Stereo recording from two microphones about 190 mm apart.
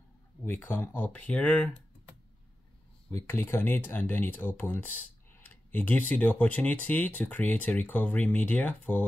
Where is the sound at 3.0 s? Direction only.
10° left (ahead or behind).